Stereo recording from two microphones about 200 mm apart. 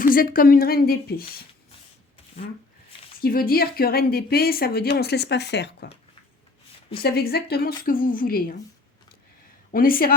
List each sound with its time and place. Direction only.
0.0 s a woman's voice: 45° left (ahead or behind)
3.2 s a woman's voice: 45° left (ahead or behind)
6.9 s a woman's voice: 50° left (ahead or behind)
9.7 s a woman's voice: 45° left (ahead or behind)